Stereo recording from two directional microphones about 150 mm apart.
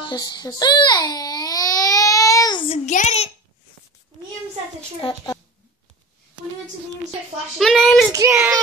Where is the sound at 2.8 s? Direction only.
50° left (ahead or behind).